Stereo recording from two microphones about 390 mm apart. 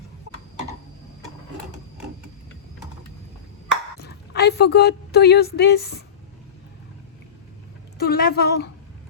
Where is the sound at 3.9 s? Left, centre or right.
Left.